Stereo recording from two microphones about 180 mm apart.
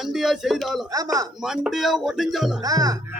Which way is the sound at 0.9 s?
20° right (ahead or behind).